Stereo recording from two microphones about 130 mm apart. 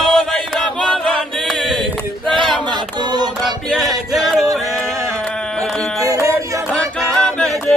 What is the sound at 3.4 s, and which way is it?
Music, centre (ahead or behind).